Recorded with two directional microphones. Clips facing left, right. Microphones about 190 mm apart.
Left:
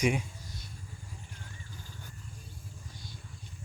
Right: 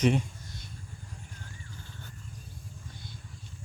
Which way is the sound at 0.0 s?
10° left (ahead or behind).